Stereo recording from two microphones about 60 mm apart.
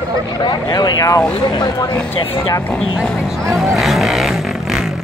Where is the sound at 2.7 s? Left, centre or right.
Centre.